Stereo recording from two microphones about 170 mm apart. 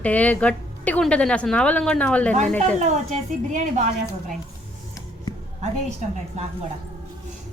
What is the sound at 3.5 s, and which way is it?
Speech, 45° right (ahead or behind).